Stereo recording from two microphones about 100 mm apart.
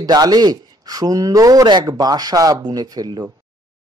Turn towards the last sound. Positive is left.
turn(degrees=-40)  # may be behind; listen again after turning